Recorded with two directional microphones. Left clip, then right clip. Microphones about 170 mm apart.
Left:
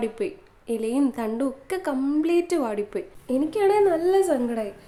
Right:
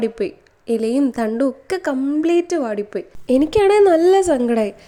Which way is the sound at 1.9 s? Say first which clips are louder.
Right 4 dB; 10° right (ahead or behind).